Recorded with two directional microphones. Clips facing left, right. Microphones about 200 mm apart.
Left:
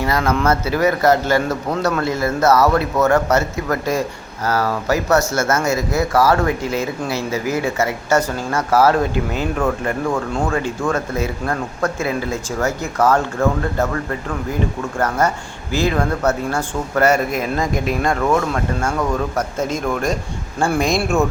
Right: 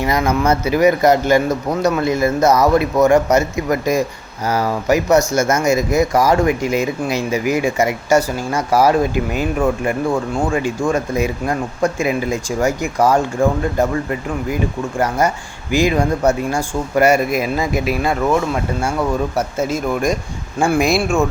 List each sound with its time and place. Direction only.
0.0 s speech: 15° right (ahead or behind)